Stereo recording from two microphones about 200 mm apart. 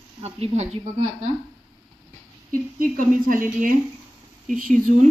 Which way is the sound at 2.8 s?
40° right (ahead or behind).